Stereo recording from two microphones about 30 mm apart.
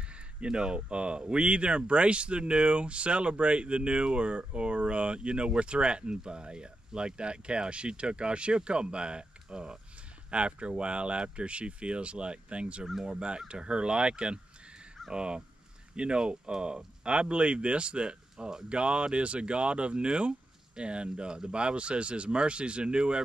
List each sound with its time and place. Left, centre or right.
0.0 s speech: right